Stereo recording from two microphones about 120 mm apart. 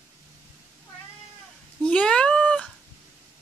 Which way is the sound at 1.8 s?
10° left (ahead or behind).